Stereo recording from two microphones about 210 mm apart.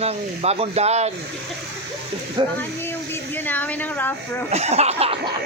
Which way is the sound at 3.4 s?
10° left (ahead or behind).